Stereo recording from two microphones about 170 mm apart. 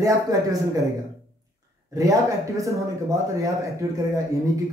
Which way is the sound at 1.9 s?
20° right (ahead or behind).